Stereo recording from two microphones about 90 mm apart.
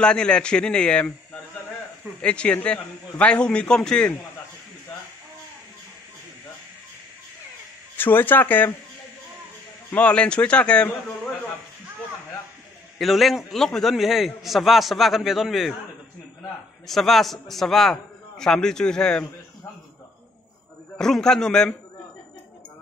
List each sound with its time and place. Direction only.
0.0 s a man's voice: 10° left (ahead or behind)
8.0 s speech: 25° left (ahead or behind)
9.8 s a man's voice: 15° left (ahead or behind)
13.0 s a man's voice: centre (ahead or behind)
16.8 s a man's voice: centre (ahead or behind)
21.0 s a man's voice: 5° left (ahead or behind)